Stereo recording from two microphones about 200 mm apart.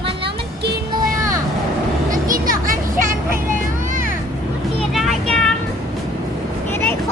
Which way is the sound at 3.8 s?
40° right (ahead or behind).